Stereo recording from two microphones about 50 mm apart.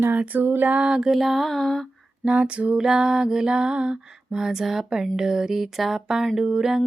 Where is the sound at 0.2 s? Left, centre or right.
Right.